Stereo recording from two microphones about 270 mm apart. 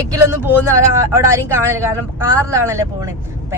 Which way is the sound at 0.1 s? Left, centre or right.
Centre.